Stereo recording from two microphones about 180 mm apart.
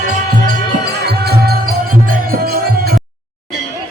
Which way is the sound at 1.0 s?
65° right (ahead or behind).